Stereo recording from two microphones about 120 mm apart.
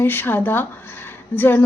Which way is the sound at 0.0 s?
15° left (ahead or behind).